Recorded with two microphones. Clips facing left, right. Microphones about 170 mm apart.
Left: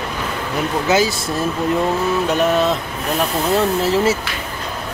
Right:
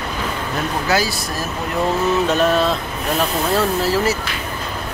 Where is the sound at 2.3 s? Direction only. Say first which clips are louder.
Even; 15° left (ahead or behind).